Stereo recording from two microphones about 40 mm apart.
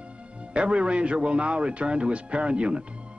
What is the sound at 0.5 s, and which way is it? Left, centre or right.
A man's voice, right.